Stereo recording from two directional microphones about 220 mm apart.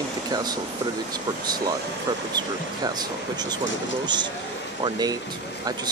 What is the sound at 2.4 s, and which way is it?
Speech, 20° right (ahead or behind).